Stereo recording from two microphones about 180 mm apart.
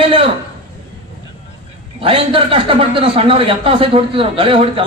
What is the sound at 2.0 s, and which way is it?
A man's voice, 30° right (ahead or behind).